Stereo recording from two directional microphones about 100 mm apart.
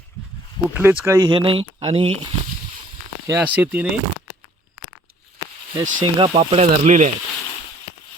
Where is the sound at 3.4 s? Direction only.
15° right (ahead or behind).